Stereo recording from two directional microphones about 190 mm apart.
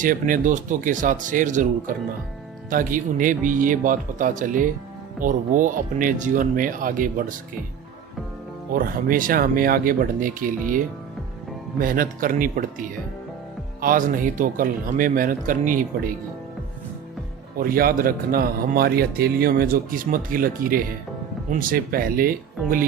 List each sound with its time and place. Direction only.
0.0 s a man's voice: 45° right (ahead or behind)
2.6 s a man's voice: 45° right (ahead or behind)
8.7 s a man's voice: 50° right (ahead or behind)
13.8 s a man's voice: 45° right (ahead or behind)
17.6 s a man's voice: 50° right (ahead or behind)